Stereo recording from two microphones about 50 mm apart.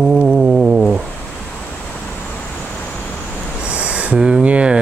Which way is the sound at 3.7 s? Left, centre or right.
Right.